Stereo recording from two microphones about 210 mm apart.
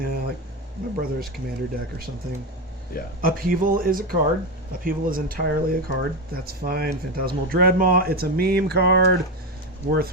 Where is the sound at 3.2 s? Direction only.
40° right (ahead or behind).